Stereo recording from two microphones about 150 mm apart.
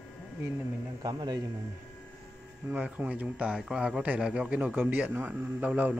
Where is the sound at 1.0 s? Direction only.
25° right (ahead or behind).